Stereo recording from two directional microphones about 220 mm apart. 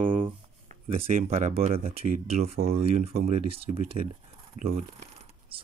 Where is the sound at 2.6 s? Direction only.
40° right (ahead or behind).